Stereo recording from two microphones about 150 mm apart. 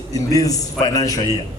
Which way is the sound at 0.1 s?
25° left (ahead or behind).